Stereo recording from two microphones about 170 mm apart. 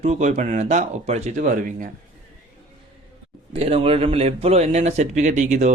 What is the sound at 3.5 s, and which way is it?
A man's voice, 35° right (ahead or behind).